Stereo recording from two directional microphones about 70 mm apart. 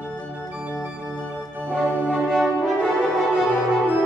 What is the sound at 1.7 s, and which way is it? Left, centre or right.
Music, centre.